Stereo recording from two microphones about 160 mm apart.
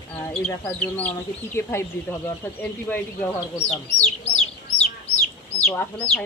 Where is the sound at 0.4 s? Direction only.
10° left (ahead or behind).